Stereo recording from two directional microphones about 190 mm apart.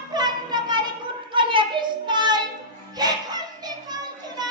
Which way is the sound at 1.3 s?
25° right (ahead or behind).